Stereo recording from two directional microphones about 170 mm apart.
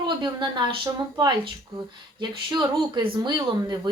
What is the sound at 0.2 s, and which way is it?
Speech, 25° right (ahead or behind).